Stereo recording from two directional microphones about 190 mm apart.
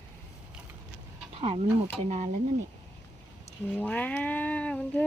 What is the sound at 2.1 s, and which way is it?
Speech, 40° right (ahead or behind).